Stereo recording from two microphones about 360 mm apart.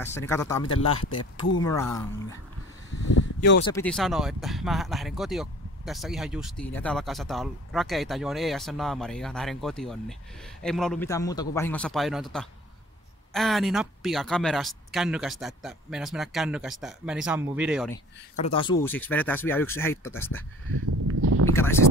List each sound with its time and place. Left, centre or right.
0.0 s speech: centre
3.3 s speech: left
3.6 s speech: centre
18.4 s speech: centre
21.1 s a sound: right